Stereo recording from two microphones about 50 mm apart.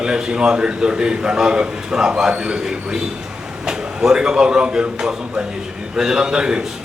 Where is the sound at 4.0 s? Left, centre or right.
Centre.